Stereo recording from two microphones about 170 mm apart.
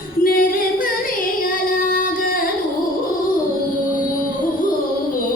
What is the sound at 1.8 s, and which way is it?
Music, 55° left (ahead or behind).